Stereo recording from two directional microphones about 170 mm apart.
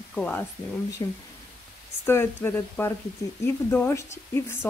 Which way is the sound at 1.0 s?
20° left (ahead or behind).